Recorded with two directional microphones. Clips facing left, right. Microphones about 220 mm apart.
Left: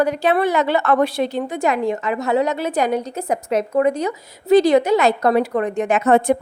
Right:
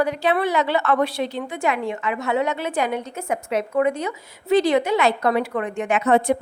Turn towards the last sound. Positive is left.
turn(degrees=45)  # may be behind; listen again after turning